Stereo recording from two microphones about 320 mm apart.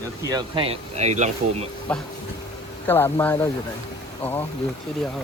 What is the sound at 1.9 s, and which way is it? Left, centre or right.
Speech, centre.